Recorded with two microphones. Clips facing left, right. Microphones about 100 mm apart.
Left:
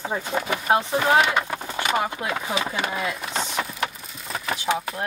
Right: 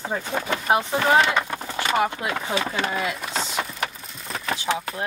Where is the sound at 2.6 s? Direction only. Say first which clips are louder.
Right 1 dB; 10° left (ahead or behind).